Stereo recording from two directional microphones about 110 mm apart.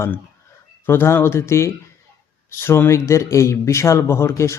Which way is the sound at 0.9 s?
20° left (ahead or behind).